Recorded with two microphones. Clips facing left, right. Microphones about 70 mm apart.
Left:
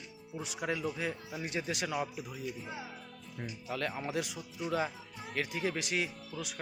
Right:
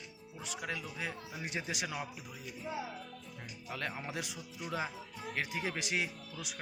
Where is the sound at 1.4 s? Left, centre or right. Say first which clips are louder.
Left 3 dB; centre.